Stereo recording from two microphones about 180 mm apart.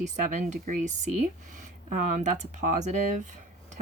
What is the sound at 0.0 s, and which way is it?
Speech, 40° right (ahead or behind).